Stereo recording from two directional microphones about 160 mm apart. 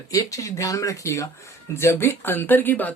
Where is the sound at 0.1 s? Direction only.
20° left (ahead or behind).